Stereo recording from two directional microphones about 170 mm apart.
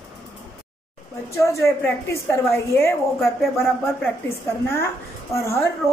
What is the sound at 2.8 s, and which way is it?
Speech, 15° left (ahead or behind).